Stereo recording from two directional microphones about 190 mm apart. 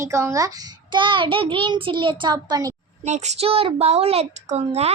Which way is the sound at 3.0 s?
35° right (ahead or behind).